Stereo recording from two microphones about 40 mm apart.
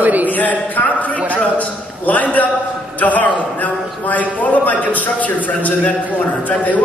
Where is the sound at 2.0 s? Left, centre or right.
Left.